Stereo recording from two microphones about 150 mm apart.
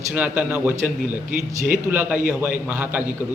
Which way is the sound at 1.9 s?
10° right (ahead or behind).